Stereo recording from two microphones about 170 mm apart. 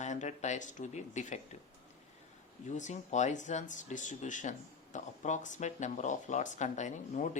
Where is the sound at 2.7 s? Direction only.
45° left (ahead or behind).